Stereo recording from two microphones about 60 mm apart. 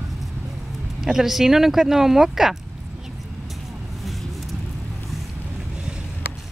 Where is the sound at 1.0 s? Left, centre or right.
Centre.